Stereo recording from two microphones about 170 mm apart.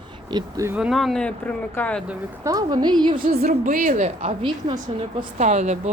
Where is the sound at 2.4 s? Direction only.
20° right (ahead or behind).